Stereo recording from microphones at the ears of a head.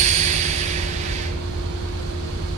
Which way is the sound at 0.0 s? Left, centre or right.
Right.